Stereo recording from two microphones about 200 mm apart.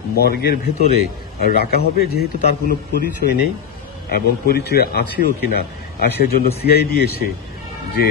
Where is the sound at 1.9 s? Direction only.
50° left (ahead or behind).